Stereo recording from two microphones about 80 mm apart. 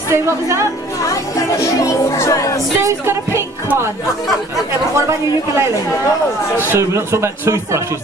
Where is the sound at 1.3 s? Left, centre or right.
Left.